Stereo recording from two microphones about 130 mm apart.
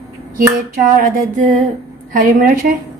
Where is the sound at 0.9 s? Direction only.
90° right.